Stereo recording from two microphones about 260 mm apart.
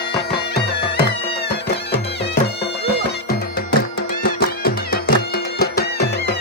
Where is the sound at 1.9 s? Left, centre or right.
Left.